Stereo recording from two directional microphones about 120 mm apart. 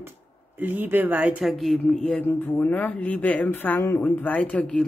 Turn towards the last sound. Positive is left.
turn(degrees=10)  # may be behind; listen again after turning